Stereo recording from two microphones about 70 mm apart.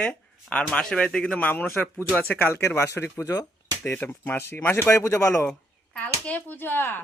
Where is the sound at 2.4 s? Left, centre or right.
Left.